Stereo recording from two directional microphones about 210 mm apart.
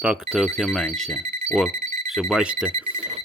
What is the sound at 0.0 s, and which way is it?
Speech, 5° right (ahead or behind).